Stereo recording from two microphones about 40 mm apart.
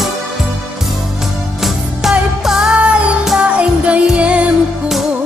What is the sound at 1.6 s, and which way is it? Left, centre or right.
Music, centre.